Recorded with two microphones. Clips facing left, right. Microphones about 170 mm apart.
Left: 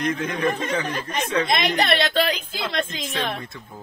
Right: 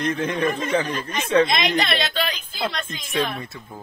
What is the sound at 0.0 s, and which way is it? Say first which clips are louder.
Speech: right 1 dB; 30° right (ahead or behind).